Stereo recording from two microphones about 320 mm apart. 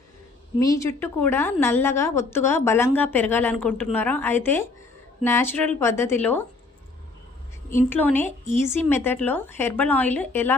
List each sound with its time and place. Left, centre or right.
0.6 s a woman's voice: centre
7.8 s a woman's voice: centre